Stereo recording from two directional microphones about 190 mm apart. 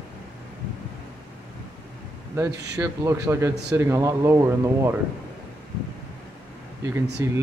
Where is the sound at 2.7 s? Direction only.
15° right (ahead or behind).